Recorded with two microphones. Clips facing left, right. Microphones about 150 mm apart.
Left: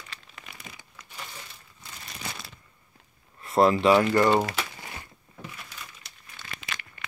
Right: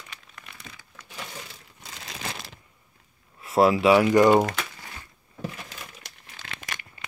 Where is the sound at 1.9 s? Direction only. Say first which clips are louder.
Right 3 dB; 90° right.